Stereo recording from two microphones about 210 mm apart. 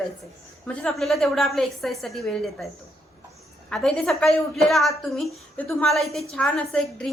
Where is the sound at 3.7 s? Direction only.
Centre (ahead or behind).